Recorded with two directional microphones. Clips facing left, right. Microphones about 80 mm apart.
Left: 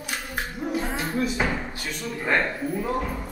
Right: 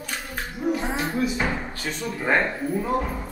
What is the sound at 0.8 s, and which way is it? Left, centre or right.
Music, centre.